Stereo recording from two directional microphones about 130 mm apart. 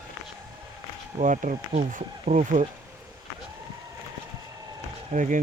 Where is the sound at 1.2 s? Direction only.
70° right (ahead or behind).